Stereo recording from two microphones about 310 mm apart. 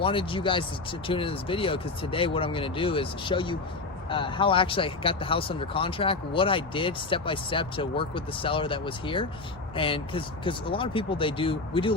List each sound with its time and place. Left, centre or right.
0.0 s speech: centre